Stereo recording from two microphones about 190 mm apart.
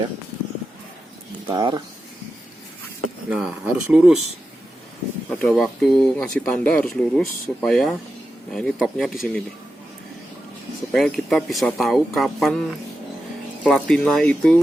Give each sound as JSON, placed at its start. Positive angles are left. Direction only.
{"t": 1.5, "sound": "speech", "side_deg": -25}
{"t": 3.2, "sound": "speech", "side_deg": -5}
{"t": 5.3, "sound": "speech", "side_deg": 5}
{"t": 10.9, "sound": "speech", "side_deg": 0}
{"t": 13.7, "sound": "speech", "side_deg": 5}